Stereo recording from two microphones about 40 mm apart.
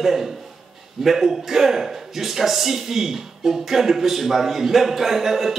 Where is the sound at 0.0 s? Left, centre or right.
Centre.